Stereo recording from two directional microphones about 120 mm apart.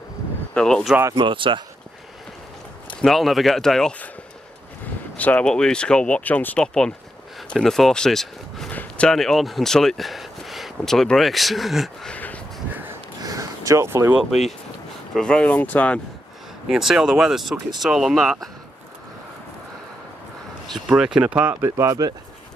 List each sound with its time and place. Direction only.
0.6 s speech: 10° left (ahead or behind)
1.1 s speech: 45° right (ahead or behind)
2.9 s speech: 5° left (ahead or behind)
5.1 s speech: 10° left (ahead or behind)
13.2 s a sound: 30° right (ahead or behind)
14.1 s speech: 5° right (ahead or behind)
15.1 s speech: 5° left (ahead or behind)
16.6 s speech: 5° right (ahead or behind)
20.7 s speech: 5° right (ahead or behind)
21.5 s speech: 25° right (ahead or behind)